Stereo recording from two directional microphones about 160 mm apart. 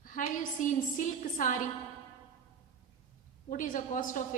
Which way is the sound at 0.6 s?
55° left (ahead or behind).